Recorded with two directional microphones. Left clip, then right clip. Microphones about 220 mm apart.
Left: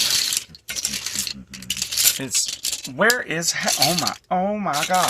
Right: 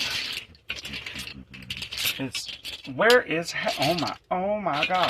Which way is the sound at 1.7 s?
45° left (ahead or behind).